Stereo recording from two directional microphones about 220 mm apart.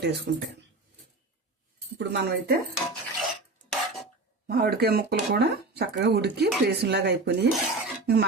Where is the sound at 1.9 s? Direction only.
55° right (ahead or behind).